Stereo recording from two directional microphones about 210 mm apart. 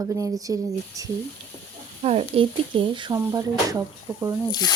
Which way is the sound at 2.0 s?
30° right (ahead or behind).